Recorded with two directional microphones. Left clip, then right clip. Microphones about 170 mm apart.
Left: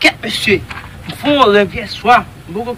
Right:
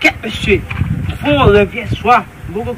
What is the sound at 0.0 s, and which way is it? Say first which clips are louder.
A man's voice: left 1 dB; 25° left (ahead or behind).